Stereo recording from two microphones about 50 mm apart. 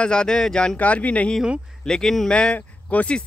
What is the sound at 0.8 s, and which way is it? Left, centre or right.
Speech, left.